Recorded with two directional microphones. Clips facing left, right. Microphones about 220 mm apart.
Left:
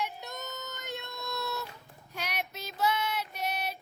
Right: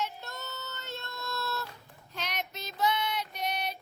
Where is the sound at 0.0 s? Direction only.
15° left (ahead or behind).